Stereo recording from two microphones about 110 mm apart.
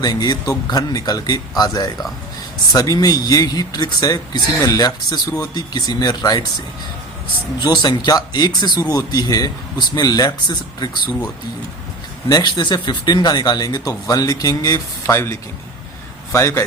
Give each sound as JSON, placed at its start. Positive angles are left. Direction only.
{"t": 0.0, "sound": "speech", "side_deg": 40}
{"t": 7.6, "sound": "speech", "side_deg": 40}
{"t": 12.3, "sound": "speech", "side_deg": 40}
{"t": 15.0, "sound": "a man's voice", "side_deg": 25}